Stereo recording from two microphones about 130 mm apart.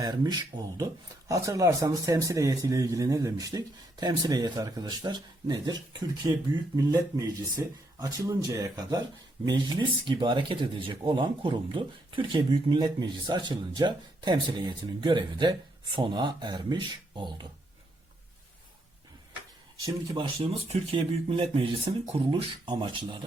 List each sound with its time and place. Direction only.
0.0 s a man's voice: 30° right (ahead or behind)
20.1 s a man's voice: 45° right (ahead or behind)